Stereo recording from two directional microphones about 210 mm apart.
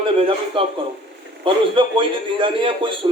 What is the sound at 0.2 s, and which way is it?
A man's voice, 25° right (ahead or behind).